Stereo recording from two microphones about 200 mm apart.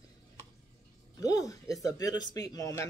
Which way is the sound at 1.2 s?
20° left (ahead or behind).